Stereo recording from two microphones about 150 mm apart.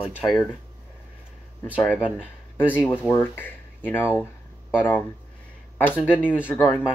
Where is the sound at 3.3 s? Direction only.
15° left (ahead or behind).